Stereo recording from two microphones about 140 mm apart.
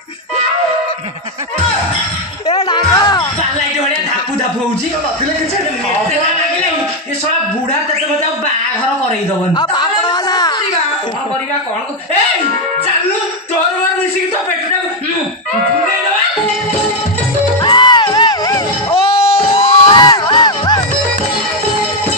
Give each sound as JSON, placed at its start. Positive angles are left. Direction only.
{"t": 2.7, "sound": "music", "side_deg": 30}
{"t": 9.5, "sound": "a sound", "side_deg": 30}
{"t": 17.6, "sound": "music", "side_deg": 35}